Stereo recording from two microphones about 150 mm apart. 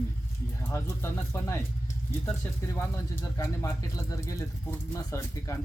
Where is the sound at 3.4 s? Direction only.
20° left (ahead or behind).